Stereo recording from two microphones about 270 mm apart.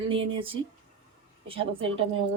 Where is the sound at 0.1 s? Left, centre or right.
Centre.